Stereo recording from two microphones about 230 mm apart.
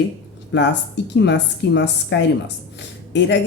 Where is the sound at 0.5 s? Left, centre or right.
Left.